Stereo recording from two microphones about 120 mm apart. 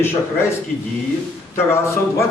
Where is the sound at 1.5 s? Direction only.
20° left (ahead or behind).